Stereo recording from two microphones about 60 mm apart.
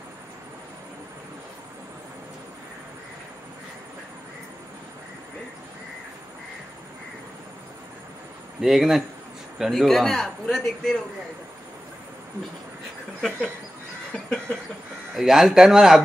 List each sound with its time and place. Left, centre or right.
8.5 s a man's voice: centre
14.1 s a sound: centre
15.1 s speech: centre